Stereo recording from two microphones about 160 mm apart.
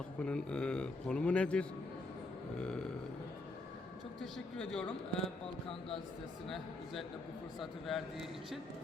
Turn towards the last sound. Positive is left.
turn(degrees=0)  # may be behind; listen again after turning